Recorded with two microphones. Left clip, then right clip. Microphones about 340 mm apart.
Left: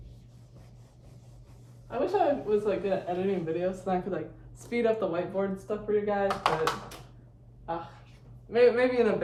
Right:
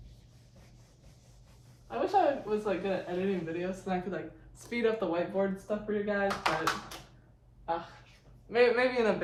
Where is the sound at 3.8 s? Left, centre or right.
Centre.